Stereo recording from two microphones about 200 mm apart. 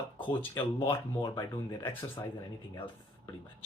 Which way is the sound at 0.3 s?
20° left (ahead or behind).